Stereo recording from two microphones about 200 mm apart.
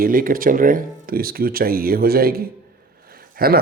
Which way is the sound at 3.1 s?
50° right (ahead or behind).